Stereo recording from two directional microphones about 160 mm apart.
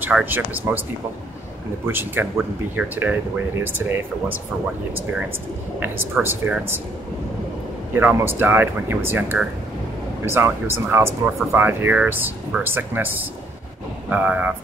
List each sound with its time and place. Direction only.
0.0 s speech: 10° right (ahead or behind)
1.9 s speech: 15° right (ahead or behind)
6.2 s speech: 15° right (ahead or behind)
7.9 s speech: 15° right (ahead or behind)